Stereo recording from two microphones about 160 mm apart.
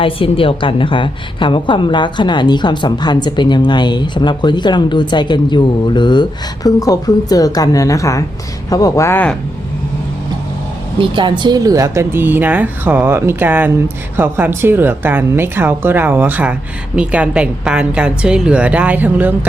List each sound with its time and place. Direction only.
0.0 s a woman's voice: 35° left (ahead or behind); by 9.3 s 15° left (ahead or behind)
10.9 s speech: 30° right (ahead or behind); by 19.3 s 10° right (ahead or behind)